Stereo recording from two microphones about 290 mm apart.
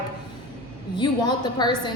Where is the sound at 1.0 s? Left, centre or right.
Centre.